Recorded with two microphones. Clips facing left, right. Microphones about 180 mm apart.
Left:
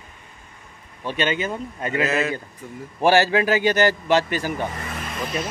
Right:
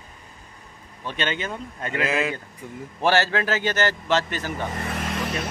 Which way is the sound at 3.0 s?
15° left (ahead or behind).